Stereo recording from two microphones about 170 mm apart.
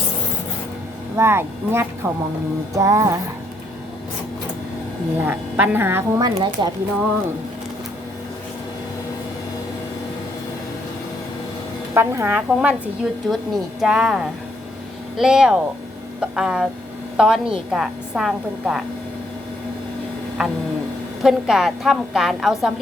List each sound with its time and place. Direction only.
1.1 s speech: 15° right (ahead or behind)
2.7 s music: 20° right (ahead or behind)
5.1 s speech: 10° right (ahead or behind)
11.9 s a woman's voice: 15° right (ahead or behind)
20.4 s a woman's voice: 5° right (ahead or behind)